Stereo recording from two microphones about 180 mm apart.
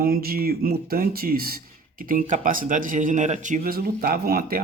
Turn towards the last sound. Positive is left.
turn(degrees=-55)  # may be behind; listen again after turning